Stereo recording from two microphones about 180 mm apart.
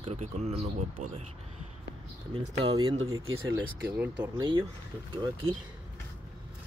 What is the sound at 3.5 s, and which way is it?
Speech, 10° right (ahead or behind).